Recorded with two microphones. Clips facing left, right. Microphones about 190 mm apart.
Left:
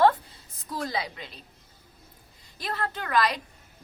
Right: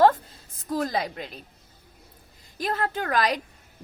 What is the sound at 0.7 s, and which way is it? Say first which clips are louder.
Speech: right 5 dB; 45° right (ahead or behind).